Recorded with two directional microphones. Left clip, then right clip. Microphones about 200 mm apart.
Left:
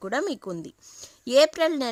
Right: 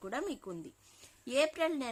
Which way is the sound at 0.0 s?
50° left (ahead or behind).